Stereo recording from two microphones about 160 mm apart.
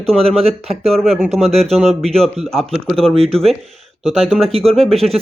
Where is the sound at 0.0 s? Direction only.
40° right (ahead or behind).